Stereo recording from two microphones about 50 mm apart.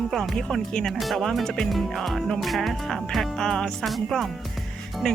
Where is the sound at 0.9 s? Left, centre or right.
Centre.